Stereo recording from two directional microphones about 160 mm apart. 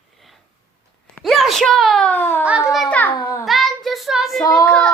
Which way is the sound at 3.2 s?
20° left (ahead or behind).